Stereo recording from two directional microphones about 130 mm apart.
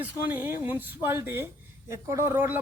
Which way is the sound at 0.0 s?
15° right (ahead or behind).